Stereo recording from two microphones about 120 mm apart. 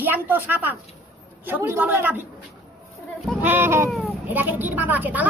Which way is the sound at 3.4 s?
15° right (ahead or behind).